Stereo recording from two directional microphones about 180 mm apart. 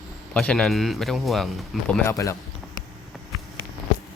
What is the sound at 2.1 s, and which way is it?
Speech, 15° left (ahead or behind).